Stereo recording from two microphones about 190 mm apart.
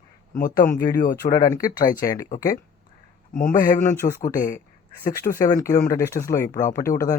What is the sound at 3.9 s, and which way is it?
Speech, 15° left (ahead or behind).